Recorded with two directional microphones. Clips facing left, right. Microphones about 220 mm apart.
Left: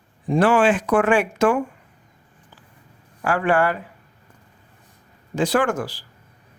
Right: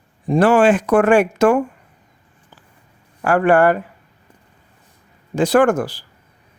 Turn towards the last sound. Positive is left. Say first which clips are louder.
# right 7 dB
turn(degrees=-50)  # may be behind; listen again after turning